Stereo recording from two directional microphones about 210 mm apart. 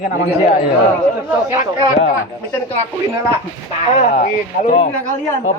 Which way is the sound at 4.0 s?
40° left (ahead or behind).